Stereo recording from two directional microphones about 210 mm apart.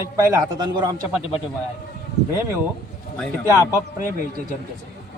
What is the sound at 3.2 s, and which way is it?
Speech, 10° left (ahead or behind).